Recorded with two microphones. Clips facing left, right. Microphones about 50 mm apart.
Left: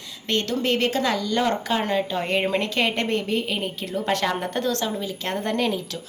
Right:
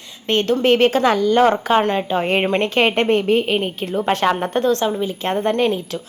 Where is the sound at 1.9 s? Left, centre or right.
Right.